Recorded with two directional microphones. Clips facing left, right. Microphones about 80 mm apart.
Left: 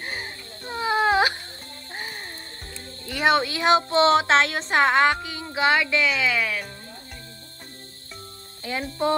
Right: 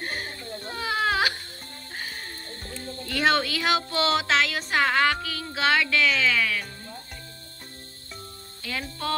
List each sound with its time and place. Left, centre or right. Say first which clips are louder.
0.0 s baby cry: right 1 dB; centre
0.7 s baby cry: left 5 dB; left
3.1 s speech: left 2 dB; centre
8.7 s speech: left 4 dB; left